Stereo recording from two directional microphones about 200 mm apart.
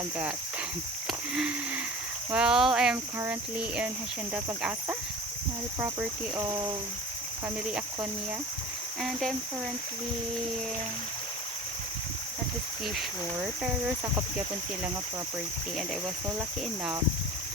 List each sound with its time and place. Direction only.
1.3 s a sound: 5° right (ahead or behind)
2.3 s cricket: 5° right (ahead or behind)
4.4 s speech: 10° right (ahead or behind)
9.0 s cricket: centre (ahead or behind)
12.8 s cricket: centre (ahead or behind)